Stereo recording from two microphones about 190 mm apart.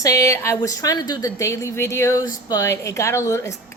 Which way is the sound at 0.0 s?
15° left (ahead or behind).